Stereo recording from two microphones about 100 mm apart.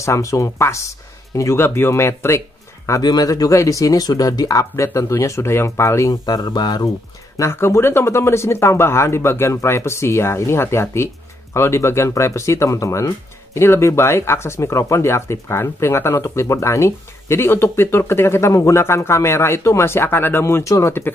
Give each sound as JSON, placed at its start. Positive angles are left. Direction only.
{"t": 0.0, "sound": "speech", "side_deg": 30}
{"t": 3.0, "sound": "speech", "side_deg": 40}
{"t": 6.2, "sound": "speech", "side_deg": 45}
{"t": 7.3, "sound": "speech", "side_deg": 25}